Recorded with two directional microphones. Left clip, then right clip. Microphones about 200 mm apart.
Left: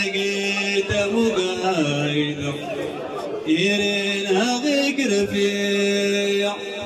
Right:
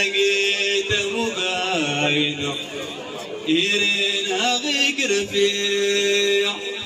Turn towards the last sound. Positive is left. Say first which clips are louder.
# right 2 dB
turn(degrees=35)  # may be behind; listen again after turning